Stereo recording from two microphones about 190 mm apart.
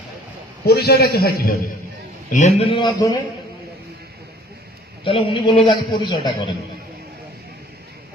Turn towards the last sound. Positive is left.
turn(degrees=25)  # may be behind; listen again after turning